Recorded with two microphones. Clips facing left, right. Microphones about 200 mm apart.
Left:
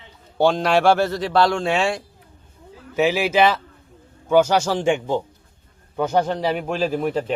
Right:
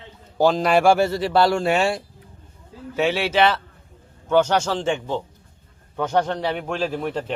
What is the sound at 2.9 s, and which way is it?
A man's voice, 5° left (ahead or behind).